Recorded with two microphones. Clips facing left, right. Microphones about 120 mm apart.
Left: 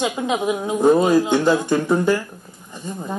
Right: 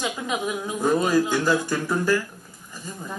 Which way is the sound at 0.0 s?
35° left (ahead or behind).